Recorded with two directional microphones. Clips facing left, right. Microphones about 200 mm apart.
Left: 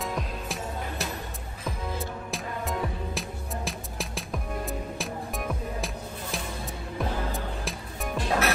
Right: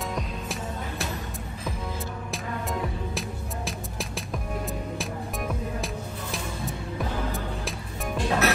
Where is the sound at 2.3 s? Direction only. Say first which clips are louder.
Right 1 dB; centre (ahead or behind).